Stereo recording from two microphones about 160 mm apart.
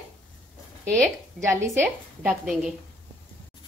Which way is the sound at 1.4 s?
20° right (ahead or behind).